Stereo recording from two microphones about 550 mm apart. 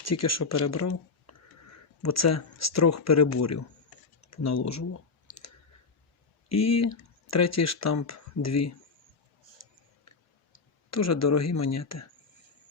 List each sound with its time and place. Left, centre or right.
0.0 s speech: left
6.5 s speech: left
10.9 s speech: left